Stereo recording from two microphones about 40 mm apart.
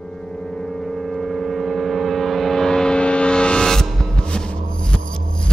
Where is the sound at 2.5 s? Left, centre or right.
Centre.